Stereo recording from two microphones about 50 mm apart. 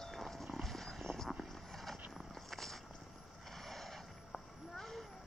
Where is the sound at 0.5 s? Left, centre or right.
Centre.